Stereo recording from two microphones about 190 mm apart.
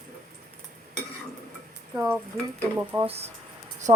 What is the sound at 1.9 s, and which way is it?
Stir, 10° right (ahead or behind).